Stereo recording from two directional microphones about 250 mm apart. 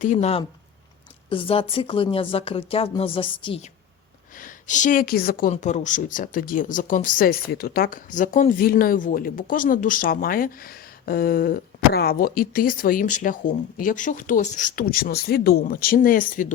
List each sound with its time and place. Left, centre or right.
0.0 s a woman's voice: left
4.4 s a woman's voice: left